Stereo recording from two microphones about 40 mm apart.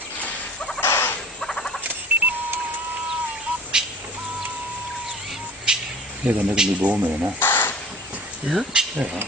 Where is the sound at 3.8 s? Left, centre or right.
Centre.